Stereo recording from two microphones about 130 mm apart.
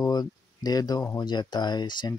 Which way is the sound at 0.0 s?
30° left (ahead or behind).